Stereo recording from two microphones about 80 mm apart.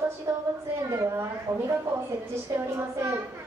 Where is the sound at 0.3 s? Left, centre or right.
Right.